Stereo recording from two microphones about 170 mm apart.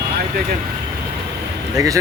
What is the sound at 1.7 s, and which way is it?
Speech, 20° right (ahead or behind).